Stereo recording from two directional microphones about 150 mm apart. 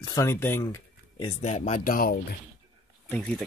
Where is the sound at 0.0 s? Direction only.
25° left (ahead or behind).